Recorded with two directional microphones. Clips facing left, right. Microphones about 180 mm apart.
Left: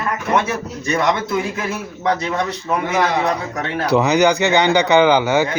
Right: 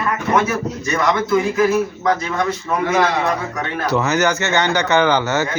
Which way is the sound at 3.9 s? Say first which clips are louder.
Left 4 dB; 15° left (ahead or behind).